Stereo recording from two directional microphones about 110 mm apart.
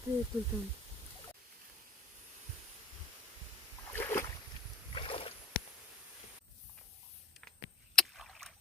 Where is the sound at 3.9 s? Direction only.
25° left (ahead or behind).